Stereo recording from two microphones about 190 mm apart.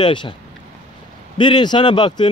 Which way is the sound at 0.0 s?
25° left (ahead or behind).